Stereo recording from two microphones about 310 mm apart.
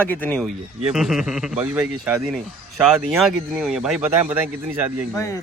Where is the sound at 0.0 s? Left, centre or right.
Centre.